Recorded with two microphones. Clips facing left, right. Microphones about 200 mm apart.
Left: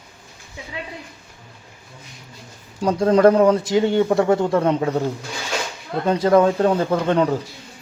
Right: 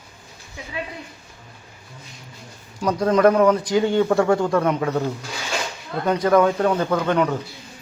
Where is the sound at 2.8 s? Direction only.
30° left (ahead or behind).